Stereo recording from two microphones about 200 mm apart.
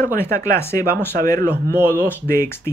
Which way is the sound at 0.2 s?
15° left (ahead or behind).